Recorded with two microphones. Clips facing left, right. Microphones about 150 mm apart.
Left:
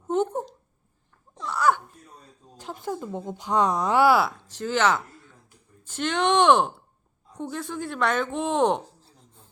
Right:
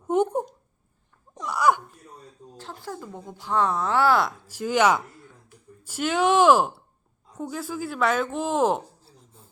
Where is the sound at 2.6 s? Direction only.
15° left (ahead or behind).